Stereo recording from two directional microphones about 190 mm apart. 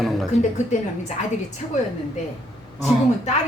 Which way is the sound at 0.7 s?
40° left (ahead or behind).